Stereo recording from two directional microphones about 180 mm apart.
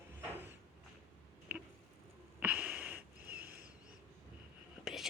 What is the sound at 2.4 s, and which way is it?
Wheeze, 10° right (ahead or behind).